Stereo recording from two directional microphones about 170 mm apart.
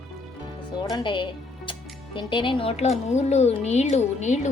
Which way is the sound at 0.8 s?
25° left (ahead or behind).